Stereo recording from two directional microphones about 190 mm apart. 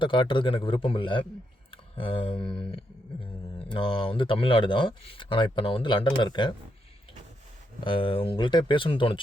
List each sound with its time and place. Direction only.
0.0 s speech: 25° left (ahead or behind)
7.9 s speech: 25° left (ahead or behind)